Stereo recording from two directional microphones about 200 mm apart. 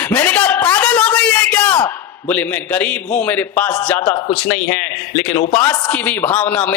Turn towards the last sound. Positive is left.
turn(degrees=10)  # may be behind; listen again after turning